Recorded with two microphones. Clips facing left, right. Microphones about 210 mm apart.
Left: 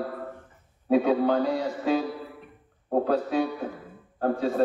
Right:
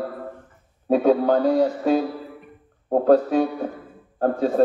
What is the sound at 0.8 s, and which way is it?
Speech, 45° right (ahead or behind).